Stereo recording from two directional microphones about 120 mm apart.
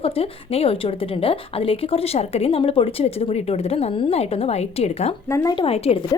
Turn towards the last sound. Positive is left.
turn(degrees=50)  # may be behind; listen again after turning